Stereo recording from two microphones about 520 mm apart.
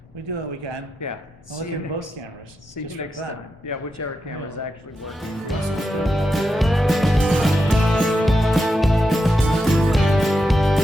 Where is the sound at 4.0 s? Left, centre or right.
Left.